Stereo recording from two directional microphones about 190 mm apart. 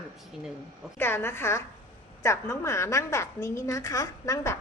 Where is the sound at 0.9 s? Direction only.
10° left (ahead or behind).